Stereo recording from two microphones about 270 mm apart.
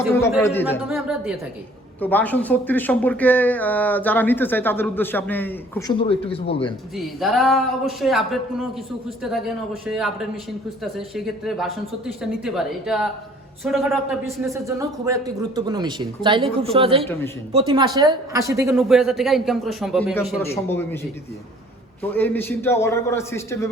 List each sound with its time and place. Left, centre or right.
0.7 s speech: centre
6.0 s speech: left
6.9 s speech: centre
9.8 s speech: centre
14.4 s speech: centre
18.8 s speech: centre
22.0 s speech: centre